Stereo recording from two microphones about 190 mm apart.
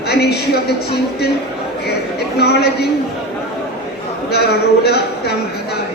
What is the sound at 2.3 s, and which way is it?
Speech, 60° left (ahead or behind).